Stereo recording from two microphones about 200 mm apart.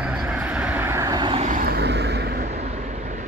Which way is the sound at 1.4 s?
45° right (ahead or behind).